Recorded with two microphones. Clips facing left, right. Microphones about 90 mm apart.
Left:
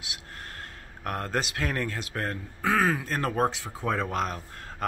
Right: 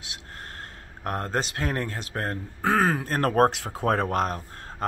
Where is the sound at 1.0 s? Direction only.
30° right (ahead or behind); by 4.4 s 45° right (ahead or behind).